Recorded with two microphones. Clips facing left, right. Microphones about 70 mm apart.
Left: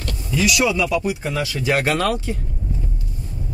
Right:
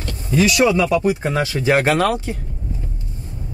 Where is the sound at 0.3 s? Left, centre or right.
Right.